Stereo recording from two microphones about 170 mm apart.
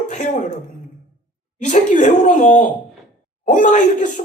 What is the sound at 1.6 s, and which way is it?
Speech, 45° left (ahead or behind).